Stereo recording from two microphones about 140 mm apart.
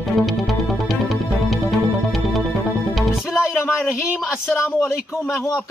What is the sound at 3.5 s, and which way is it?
Speech, 15° left (ahead or behind).